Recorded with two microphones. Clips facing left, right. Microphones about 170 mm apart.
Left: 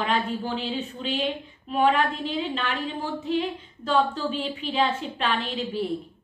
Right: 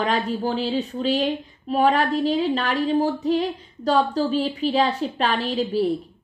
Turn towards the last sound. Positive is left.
turn(degrees=-40)  # may be behind; listen again after turning